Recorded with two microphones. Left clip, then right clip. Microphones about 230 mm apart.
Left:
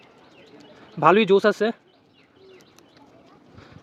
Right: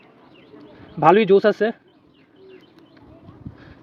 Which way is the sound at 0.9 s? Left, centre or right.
Centre.